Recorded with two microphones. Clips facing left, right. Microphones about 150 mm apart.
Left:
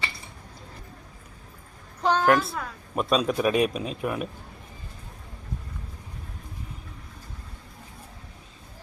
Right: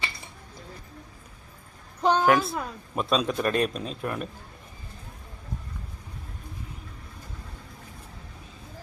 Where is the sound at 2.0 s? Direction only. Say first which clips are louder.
Right 1 dB; 15° right (ahead or behind).